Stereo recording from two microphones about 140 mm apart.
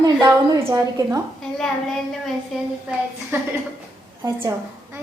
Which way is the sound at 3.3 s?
15° right (ahead or behind).